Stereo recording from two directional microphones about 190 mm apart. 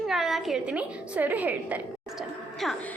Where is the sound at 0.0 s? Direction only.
Centre (ahead or behind).